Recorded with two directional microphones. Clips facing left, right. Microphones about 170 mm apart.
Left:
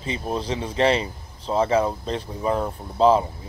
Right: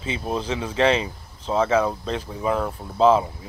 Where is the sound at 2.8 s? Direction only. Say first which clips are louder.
Even; centre (ahead or behind).